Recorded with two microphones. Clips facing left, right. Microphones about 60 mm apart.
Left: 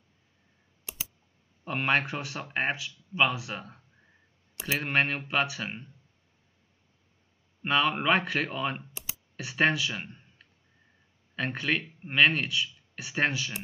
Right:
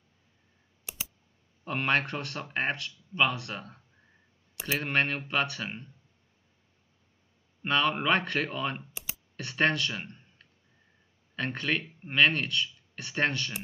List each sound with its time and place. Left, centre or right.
1.6 s speech: centre
7.6 s speech: centre